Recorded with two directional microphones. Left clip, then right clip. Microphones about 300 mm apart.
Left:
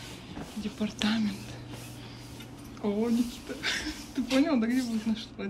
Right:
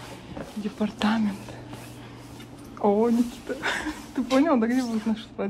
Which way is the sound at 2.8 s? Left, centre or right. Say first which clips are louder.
Right 8 dB; centre.